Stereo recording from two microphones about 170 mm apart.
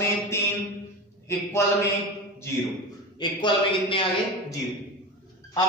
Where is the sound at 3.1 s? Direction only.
30° left (ahead or behind).